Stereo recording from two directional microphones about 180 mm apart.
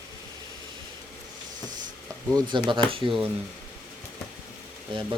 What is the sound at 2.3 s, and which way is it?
Speech, 25° right (ahead or behind).